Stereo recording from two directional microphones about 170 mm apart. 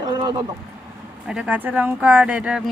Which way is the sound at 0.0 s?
25° right (ahead or behind).